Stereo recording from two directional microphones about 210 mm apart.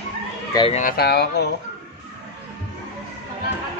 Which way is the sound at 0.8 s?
50° left (ahead or behind).